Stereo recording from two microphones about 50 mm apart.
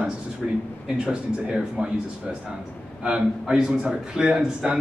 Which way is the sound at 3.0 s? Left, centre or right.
Centre.